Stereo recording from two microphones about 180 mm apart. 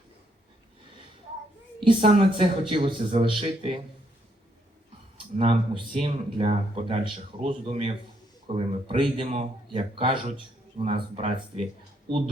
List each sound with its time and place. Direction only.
1.8 s speech: 30° right (ahead or behind)
5.1 s speech: 30° right (ahead or behind)